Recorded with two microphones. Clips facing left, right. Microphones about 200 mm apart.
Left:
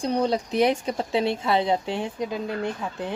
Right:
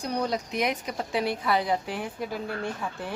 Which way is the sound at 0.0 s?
25° left (ahead or behind).